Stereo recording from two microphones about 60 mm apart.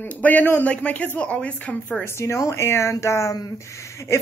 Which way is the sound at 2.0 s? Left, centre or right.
Left.